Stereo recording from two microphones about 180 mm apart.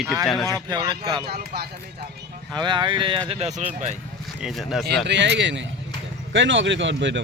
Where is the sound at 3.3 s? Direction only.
35° right (ahead or behind).